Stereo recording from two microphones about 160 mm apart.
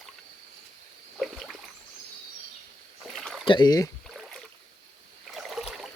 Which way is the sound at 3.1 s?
Centre (ahead or behind).